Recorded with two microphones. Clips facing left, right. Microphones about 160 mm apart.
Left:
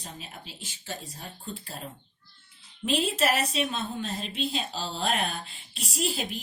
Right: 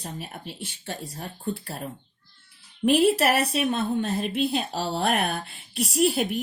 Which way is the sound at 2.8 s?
60° right (ahead or behind).